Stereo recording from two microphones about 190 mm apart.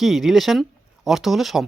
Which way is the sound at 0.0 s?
Centre (ahead or behind).